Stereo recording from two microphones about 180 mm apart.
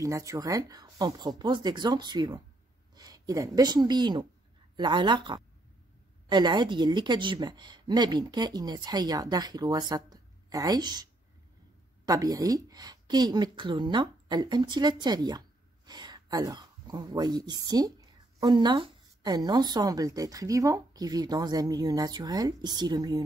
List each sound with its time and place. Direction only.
0.0 s a woman's voice: 20° right (ahead or behind)
12.1 s a woman's voice: 20° right (ahead or behind)